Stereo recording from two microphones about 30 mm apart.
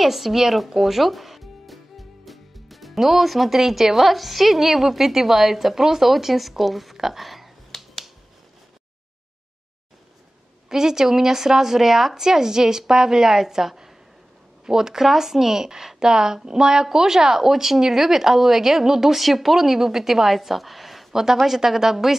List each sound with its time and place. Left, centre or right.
0.0 s speech: centre
7.7 s finger snapping: centre
10.7 s speech: centre
21.1 s speech: centre